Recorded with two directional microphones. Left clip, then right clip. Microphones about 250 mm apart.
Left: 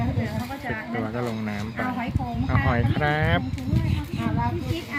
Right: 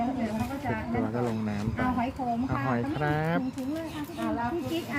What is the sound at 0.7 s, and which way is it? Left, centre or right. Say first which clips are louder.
A woman's voice: left 2 dB; centre.